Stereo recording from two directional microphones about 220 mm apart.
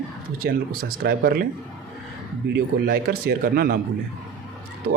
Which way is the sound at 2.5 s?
40° right (ahead or behind).